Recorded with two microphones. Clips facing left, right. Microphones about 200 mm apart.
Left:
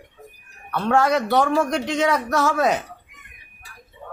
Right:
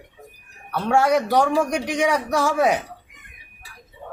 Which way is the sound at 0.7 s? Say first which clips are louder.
Even; 10° right (ahead or behind).